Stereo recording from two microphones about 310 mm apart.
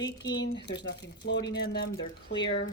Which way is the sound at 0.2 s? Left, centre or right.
Left.